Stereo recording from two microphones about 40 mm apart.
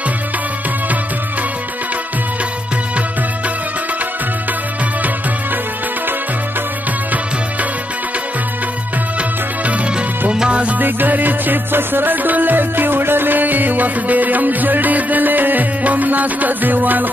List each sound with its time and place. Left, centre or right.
10.5 s music: right
10.8 s music: right